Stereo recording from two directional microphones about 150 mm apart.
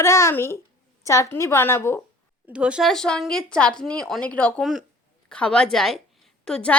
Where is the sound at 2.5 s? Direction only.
5° right (ahead or behind).